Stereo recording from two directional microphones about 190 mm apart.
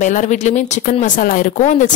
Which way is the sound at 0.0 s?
40° left (ahead or behind).